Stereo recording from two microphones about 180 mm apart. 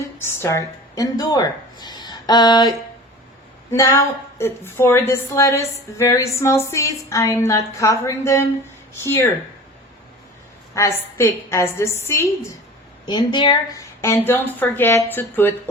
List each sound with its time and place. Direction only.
0.2 s a woman's voice: 15° left (ahead or behind)
10.8 s a woman's voice: 15° left (ahead or behind)
13.1 s a woman's voice: 25° left (ahead or behind)